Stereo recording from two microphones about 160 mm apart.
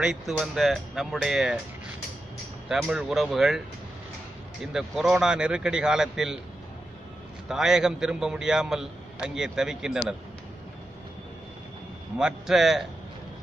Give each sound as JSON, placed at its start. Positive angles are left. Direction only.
{"t": 0.0, "sound": "a man's voice", "side_deg": -5}
{"t": 2.7, "sound": "a man's voice", "side_deg": -5}
{"t": 4.7, "sound": "a man's voice", "side_deg": 0}
{"t": 7.4, "sound": "a man's voice", "side_deg": -5}
{"t": 12.2, "sound": "a man's voice", "side_deg": -5}